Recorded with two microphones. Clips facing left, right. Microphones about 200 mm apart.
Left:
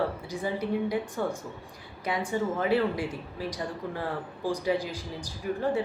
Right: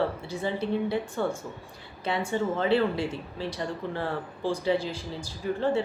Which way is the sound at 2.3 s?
10° left (ahead or behind).